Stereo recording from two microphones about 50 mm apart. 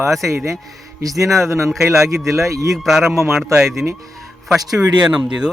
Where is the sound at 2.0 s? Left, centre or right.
Right.